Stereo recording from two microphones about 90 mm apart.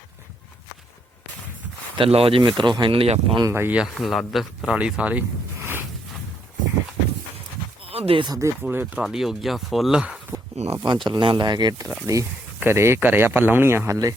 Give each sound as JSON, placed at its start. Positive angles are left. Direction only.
{"t": 2.0, "sound": "speech", "side_deg": -90}
{"t": 2.4, "sound": "speech", "side_deg": -60}
{"t": 3.5, "sound": "speech", "side_deg": -25}
{"t": 3.9, "sound": "speech", "side_deg": 0}
{"t": 4.7, "sound": "speech", "side_deg": -10}
{"t": 5.5, "sound": "a sound", "side_deg": -30}
{"t": 7.9, "sound": "a sound", "side_deg": -90}
{"t": 8.3, "sound": "speech", "side_deg": -35}
{"t": 8.7, "sound": "speech", "side_deg": -20}
{"t": 9.0, "sound": "speech", "side_deg": -5}
{"t": 10.7, "sound": "speech", "side_deg": -65}
{"t": 12.1, "sound": "speech", "side_deg": -40}
{"t": 12.5, "sound": "speech", "side_deg": -30}